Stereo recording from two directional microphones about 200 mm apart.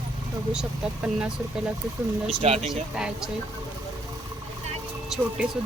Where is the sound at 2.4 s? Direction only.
30° right (ahead or behind).